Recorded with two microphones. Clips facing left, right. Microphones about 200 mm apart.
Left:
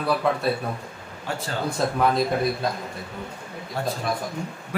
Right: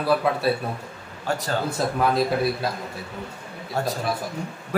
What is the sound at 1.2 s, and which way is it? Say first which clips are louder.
Speech: right 4 dB; 40° right (ahead or behind).